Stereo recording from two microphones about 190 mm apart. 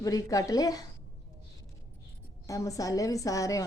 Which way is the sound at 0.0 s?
20° left (ahead or behind).